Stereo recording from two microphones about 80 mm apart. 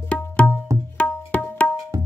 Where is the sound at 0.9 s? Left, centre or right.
Centre.